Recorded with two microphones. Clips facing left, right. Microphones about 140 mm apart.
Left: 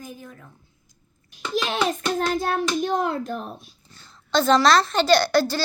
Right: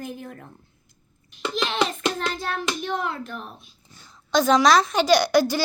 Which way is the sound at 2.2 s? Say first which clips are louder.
Left 5 dB; 45° left (ahead or behind).